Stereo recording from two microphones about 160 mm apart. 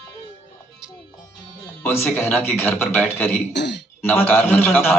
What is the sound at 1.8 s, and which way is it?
Music, 15° left (ahead or behind).